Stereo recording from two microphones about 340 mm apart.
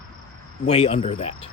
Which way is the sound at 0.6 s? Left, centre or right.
Centre.